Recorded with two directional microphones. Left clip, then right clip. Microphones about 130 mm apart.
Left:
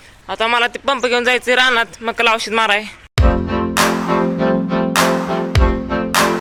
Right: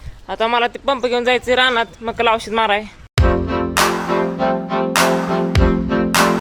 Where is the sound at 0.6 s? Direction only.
5° right (ahead or behind).